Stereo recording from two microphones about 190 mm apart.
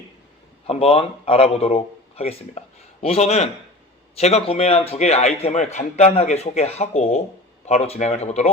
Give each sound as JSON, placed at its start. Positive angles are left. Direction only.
{"t": 0.7, "sound": "a man's voice", "side_deg": 30}